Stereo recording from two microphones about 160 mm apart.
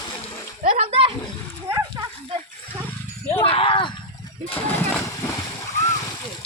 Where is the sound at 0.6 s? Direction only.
50° right (ahead or behind).